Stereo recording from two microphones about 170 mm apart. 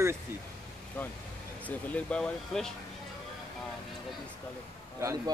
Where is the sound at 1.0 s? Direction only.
10° left (ahead or behind).